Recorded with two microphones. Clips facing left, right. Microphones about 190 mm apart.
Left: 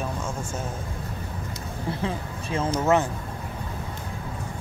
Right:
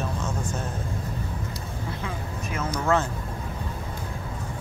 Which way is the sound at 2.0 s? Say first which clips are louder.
Left 3 dB; 30° left (ahead or behind).